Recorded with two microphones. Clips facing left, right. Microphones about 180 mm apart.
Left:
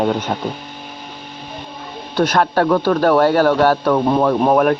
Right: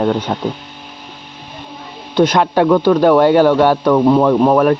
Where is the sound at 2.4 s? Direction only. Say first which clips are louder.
Even; 10° right (ahead or behind).